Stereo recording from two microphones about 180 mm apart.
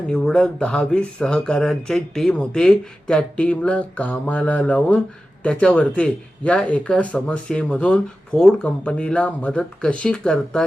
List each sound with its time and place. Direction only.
0.1 s speech: 5° left (ahead or behind)